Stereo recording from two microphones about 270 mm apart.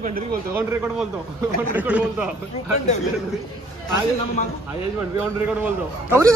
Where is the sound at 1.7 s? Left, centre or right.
Centre.